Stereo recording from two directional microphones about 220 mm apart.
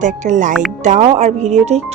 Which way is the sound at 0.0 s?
35° right (ahead or behind).